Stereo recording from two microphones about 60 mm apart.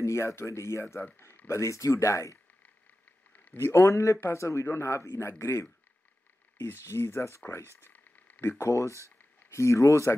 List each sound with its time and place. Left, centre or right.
0.0 s speech: left
3.5 s speech: left
9.5 s speech: left